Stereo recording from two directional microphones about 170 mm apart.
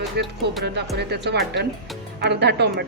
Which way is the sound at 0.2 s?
75° right (ahead or behind).